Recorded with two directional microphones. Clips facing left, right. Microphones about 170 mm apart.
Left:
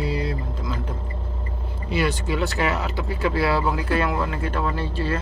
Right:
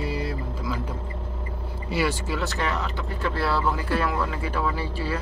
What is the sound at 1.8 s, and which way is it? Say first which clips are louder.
A man's voice: left 2 dB; 5° right (ahead or behind).